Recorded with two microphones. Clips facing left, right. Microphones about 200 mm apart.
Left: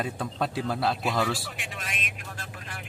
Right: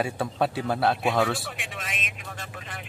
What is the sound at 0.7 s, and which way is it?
Speech, 60° right (ahead or behind).